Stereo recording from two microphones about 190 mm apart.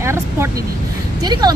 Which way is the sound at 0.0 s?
15° right (ahead or behind).